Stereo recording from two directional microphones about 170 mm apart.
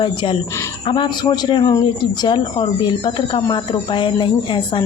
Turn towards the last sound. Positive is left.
turn(degrees=30)  # may be behind; listen again after turning